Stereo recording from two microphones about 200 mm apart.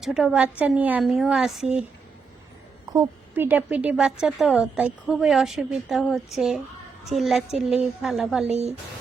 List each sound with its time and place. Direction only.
0.0 s a woman's voice: centre (ahead or behind)
2.9 s a woman's voice: 10° right (ahead or behind)
8.4 s speech: 30° right (ahead or behind)